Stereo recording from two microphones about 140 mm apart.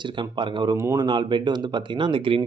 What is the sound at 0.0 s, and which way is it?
Speech, 35° right (ahead or behind).